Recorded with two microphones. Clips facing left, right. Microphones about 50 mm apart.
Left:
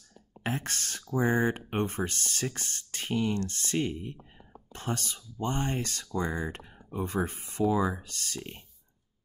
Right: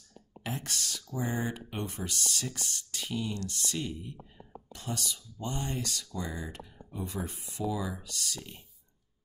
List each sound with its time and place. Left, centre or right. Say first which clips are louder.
0.4 s speech: left 4 dB; left